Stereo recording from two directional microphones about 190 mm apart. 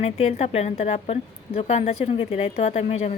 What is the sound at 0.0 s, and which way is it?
A woman's voice, 35° left (ahead or behind).